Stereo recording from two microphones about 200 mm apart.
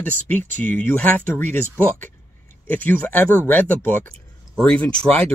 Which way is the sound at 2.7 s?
10° left (ahead or behind).